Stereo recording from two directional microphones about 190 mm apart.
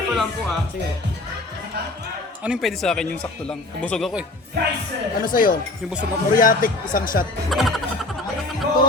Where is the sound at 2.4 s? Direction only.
Centre (ahead or behind).